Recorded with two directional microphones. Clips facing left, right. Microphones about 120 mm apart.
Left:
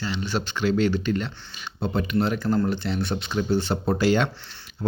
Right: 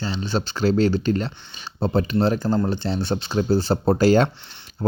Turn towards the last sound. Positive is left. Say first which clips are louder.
# right 5 dB
turn(degrees=-40)  # may be behind; listen again after turning